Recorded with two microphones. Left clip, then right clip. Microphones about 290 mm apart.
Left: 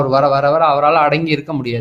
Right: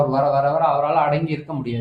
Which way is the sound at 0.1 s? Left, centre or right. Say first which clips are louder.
Left 6 dB; left.